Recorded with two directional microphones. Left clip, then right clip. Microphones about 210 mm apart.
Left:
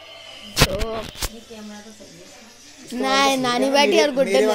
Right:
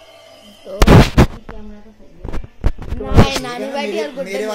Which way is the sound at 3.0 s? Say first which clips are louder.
Even; 40° left (ahead or behind).